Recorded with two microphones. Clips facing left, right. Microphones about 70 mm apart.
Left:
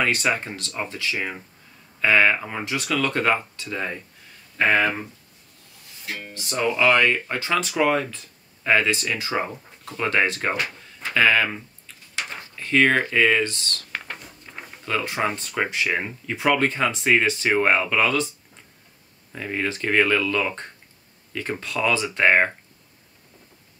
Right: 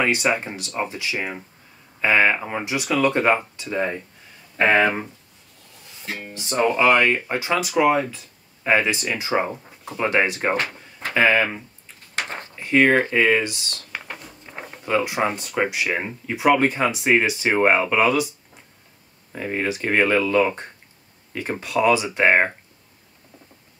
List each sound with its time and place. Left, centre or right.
0.0 s speech: centre
4.6 s speech: right
6.5 s speech: right
6.8 s speech: centre
13.9 s a sound: centre
14.4 s a sound: centre
15.2 s speech: centre
19.3 s speech: centre